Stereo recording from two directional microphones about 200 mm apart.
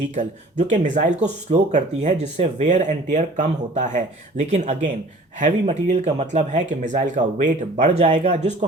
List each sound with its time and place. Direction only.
0.1 s speech: 35° right (ahead or behind)